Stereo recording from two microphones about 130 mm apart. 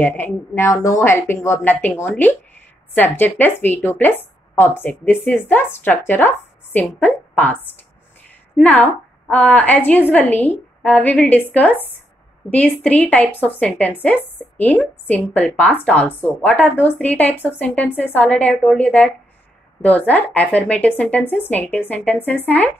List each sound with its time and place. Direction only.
0.0 s a woman's voice: 15° left (ahead or behind)